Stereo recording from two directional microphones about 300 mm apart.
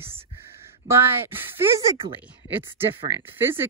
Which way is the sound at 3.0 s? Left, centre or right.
Centre.